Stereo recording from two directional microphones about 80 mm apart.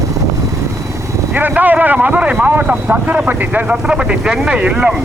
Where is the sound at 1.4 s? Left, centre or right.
Right.